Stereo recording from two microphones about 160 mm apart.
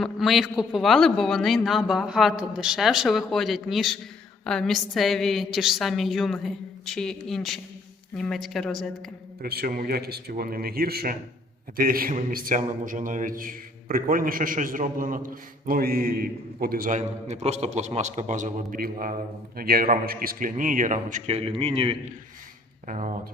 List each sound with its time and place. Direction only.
0.0 s a man's voice: centre (ahead or behind)
9.4 s a man's voice: 75° right (ahead or behind)
17.0 s a man's voice: 45° right (ahead or behind)
22.9 s a man's voice: 50° right (ahead or behind)